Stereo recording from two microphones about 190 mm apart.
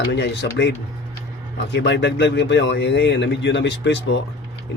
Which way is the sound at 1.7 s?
65° left (ahead or behind).